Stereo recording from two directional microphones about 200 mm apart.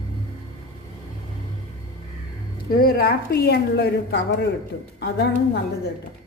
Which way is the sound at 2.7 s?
50° left (ahead or behind).